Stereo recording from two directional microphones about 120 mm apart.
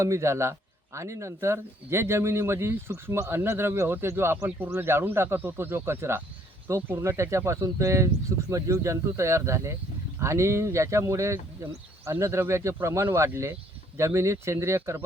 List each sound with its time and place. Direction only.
0.0 s speech: 25° right (ahead or behind)